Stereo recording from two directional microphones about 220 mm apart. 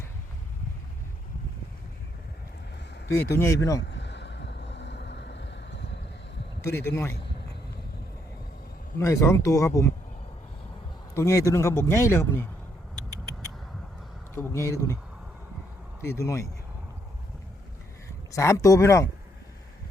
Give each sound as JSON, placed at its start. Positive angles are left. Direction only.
{"t": 3.3, "sound": "speech", "side_deg": 15}
{"t": 3.8, "sound": "vehicle", "side_deg": 50}
{"t": 6.7, "sound": "speech", "side_deg": 10}
{"t": 9.0, "sound": "speech", "side_deg": 15}
{"t": 11.2, "sound": "speech", "side_deg": 15}
{"t": 14.3, "sound": "speech", "side_deg": 10}
{"t": 16.0, "sound": "speech", "side_deg": 15}
{"t": 18.3, "sound": "speech", "side_deg": 15}